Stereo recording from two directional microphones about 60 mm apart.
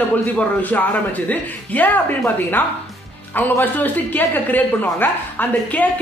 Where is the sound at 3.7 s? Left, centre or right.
Left.